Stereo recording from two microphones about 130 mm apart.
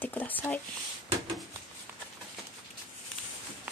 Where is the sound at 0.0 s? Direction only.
15° left (ahead or behind).